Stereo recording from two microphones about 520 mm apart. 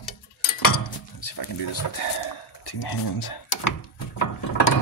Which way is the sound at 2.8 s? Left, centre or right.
Left.